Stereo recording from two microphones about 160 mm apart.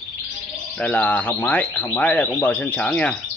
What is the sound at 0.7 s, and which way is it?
Speech, 10° left (ahead or behind).